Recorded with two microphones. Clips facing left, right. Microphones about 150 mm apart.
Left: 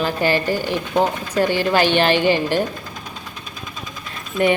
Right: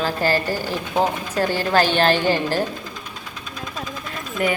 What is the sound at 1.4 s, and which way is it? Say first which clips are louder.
Speech: left 2 dB; 15° left (ahead or behind).